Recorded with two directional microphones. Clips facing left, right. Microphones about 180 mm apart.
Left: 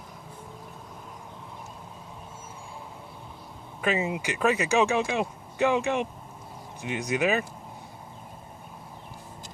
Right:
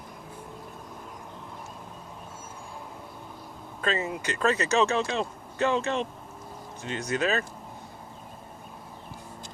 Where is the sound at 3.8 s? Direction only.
15° left (ahead or behind).